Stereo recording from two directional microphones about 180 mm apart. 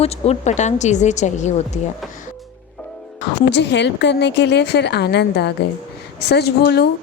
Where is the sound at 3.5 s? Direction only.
75° left (ahead or behind).